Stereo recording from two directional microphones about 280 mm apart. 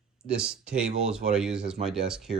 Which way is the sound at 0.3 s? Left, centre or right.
Centre.